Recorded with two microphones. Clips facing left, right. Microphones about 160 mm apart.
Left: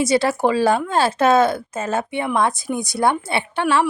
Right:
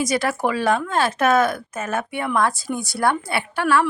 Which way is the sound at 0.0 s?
30° left (ahead or behind).